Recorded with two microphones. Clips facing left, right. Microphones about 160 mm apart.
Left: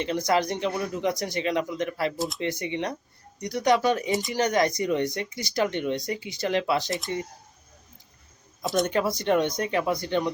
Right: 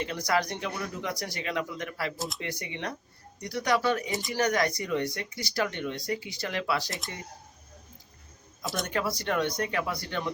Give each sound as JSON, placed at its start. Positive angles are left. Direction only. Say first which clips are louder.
{"t": 0.0, "sound": "speech", "louder": "left 4 dB", "side_deg": 20}
{"t": 2.1, "sound": "speech", "louder": "left 6 dB", "side_deg": 0}
{"t": 2.4, "sound": "speech", "louder": "left 7 dB", "side_deg": 25}
{"t": 8.6, "sound": "speech", "louder": "left 9 dB", "side_deg": 0}
{"t": 8.9, "sound": "speech", "louder": "left 6 dB", "side_deg": 20}